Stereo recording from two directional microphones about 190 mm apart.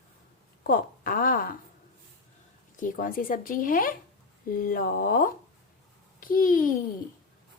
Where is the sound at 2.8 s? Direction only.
45° left (ahead or behind).